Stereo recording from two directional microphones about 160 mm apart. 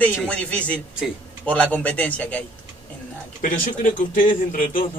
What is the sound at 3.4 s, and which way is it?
A man's voice, 55° left (ahead or behind).